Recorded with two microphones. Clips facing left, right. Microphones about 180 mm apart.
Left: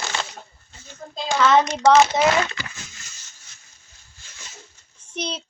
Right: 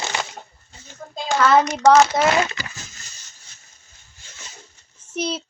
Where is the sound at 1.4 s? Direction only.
5° right (ahead or behind).